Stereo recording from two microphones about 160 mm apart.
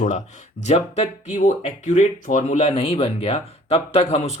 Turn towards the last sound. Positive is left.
turn(degrees=40)  # may be behind; listen again after turning